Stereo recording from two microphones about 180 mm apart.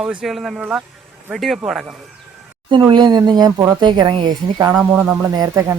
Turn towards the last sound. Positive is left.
turn(degrees=-15)  # may be behind; listen again after turning